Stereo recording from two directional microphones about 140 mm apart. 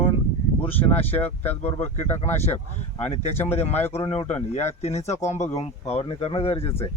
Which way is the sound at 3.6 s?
50° left (ahead or behind).